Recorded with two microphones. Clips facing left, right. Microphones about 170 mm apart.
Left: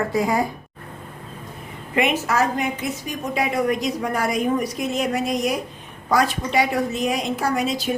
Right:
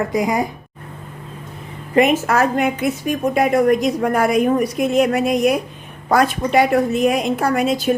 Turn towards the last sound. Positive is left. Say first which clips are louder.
# right 5 dB
turn(degrees=-55)  # may be behind; listen again after turning